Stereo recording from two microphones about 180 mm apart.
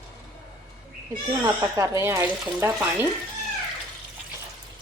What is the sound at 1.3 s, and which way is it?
Speech, 20° right (ahead or behind).